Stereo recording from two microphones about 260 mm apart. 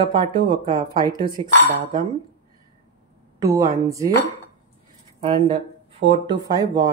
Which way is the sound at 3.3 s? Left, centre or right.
Centre.